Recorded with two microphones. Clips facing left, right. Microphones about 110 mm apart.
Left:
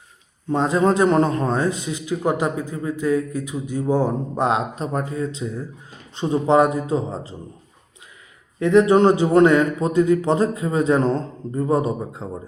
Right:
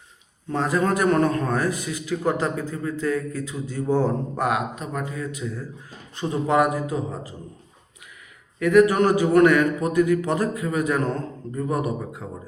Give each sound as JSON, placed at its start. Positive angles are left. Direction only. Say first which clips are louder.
{"t": 0.5, "sound": "a man's voice", "louder": "left 4 dB", "side_deg": 20}
{"t": 4.4, "sound": "a man's voice", "louder": "left 4 dB", "side_deg": 30}
{"t": 8.5, "sound": "a man's voice", "louder": "left 2 dB", "side_deg": 25}